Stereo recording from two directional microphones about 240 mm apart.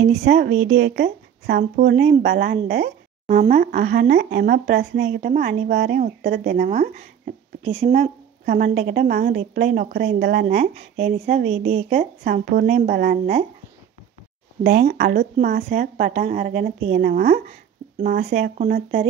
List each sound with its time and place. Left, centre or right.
0.1 s speech: right
5.2 s a woman's voice: right
10.4 s a woman's voice: right
14.6 s a woman's voice: right